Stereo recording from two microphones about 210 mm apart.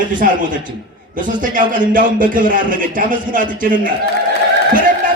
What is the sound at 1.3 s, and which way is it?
Speech, 40° right (ahead or behind).